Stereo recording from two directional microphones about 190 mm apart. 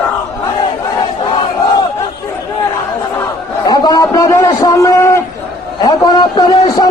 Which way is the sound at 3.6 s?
20° left (ahead or behind).